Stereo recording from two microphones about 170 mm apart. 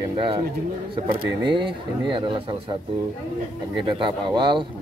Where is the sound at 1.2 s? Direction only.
30° right (ahead or behind).